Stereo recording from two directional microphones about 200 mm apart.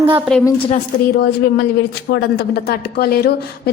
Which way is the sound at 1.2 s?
55° left (ahead or behind).